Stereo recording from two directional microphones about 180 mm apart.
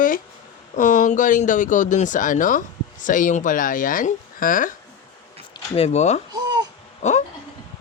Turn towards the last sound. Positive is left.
turn(degrees=40)  # may be behind; listen again after turning